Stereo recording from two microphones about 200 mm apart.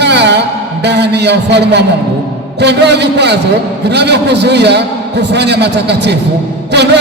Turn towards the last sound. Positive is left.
turn(degrees=-55)  # may be behind; listen again after turning